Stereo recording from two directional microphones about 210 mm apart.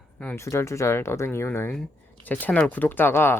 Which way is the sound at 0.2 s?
10° left (ahead or behind).